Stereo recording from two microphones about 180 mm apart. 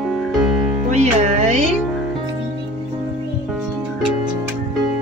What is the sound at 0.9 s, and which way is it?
Music, 40° right (ahead or behind).